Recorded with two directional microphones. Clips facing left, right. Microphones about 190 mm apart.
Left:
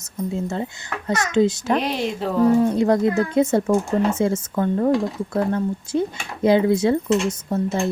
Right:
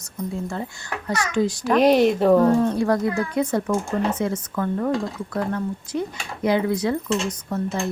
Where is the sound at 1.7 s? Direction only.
50° right (ahead or behind).